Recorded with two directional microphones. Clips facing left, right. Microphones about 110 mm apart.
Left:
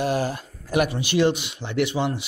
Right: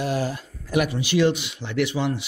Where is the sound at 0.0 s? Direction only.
50° left (ahead or behind).